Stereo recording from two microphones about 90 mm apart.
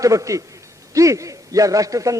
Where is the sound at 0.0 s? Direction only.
40° right (ahead or behind).